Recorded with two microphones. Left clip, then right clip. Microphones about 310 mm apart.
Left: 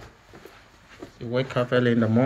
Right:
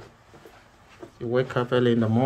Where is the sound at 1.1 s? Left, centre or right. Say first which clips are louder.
Right 1 dB; centre.